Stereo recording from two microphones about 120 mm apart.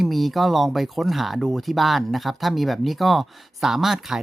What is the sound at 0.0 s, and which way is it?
Speech, centre (ahead or behind).